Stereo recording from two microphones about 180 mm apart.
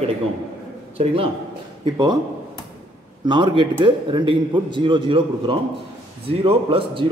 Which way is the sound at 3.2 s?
25° right (ahead or behind).